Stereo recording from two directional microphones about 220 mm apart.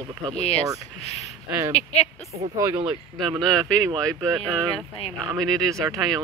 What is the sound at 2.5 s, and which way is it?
Speech, 20° right (ahead or behind).